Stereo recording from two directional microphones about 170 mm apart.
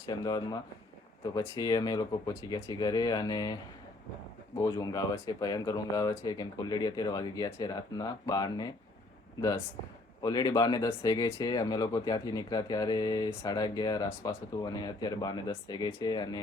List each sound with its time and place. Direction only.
0.0 s speech: 20° left (ahead or behind)
10.2 s speech: 20° left (ahead or behind)